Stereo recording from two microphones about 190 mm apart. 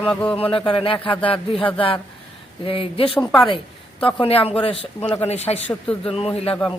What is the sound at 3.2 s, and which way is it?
Speech, 10° left (ahead or behind).